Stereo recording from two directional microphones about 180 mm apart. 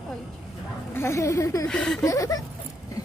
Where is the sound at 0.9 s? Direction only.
15° left (ahead or behind).